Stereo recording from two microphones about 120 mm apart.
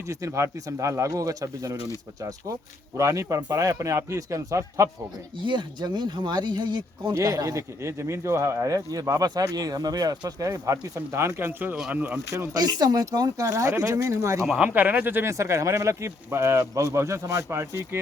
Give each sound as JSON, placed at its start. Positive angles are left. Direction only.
{"t": 0.1, "sound": "speech", "side_deg": -25}
{"t": 5.4, "sound": "speech", "side_deg": -40}
{"t": 7.1, "sound": "speech", "side_deg": -30}
{"t": 14.4, "sound": "speech", "side_deg": -5}